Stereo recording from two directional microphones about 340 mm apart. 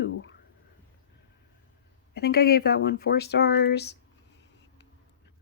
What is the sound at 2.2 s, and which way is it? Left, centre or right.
Speech, left.